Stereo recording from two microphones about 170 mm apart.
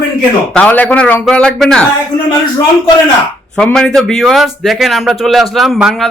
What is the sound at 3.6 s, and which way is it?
Speech, 5° left (ahead or behind).